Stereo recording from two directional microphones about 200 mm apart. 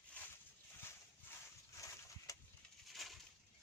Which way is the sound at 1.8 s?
15° left (ahead or behind).